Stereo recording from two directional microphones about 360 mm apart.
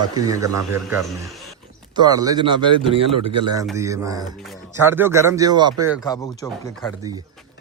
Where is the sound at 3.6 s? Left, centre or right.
Centre.